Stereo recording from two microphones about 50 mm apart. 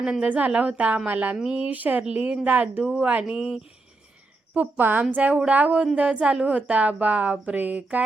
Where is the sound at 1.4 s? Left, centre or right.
Centre.